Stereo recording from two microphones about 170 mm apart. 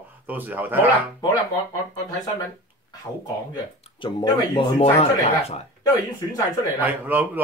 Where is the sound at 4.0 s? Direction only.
30° left (ahead or behind).